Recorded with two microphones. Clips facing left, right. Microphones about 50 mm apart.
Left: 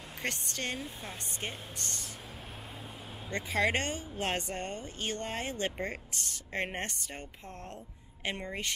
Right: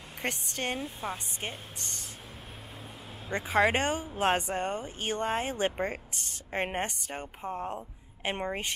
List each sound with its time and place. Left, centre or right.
0.2 s a woman's voice: centre
3.3 s a woman's voice: centre